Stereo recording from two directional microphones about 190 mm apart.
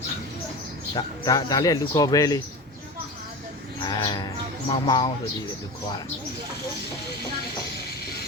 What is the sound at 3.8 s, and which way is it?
Bird, 20° left (ahead or behind).